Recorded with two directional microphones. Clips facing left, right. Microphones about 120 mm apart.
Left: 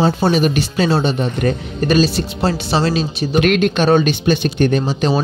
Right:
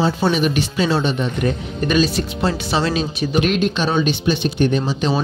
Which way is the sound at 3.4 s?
65° left (ahead or behind).